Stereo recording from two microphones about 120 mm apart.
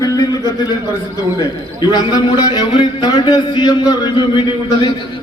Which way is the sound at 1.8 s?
35° left (ahead or behind).